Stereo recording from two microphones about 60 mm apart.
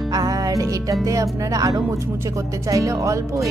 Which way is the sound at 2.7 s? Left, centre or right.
Right.